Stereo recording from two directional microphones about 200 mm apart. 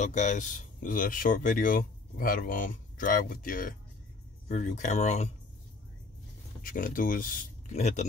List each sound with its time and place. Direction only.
0.0 s speech: 35° left (ahead or behind)
6.6 s speech: 45° left (ahead or behind)